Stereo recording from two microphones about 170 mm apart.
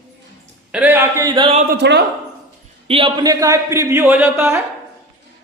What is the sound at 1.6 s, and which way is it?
Speech, 85° right.